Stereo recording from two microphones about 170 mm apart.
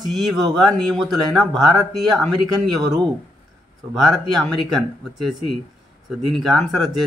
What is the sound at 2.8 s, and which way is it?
Speech, 25° right (ahead or behind).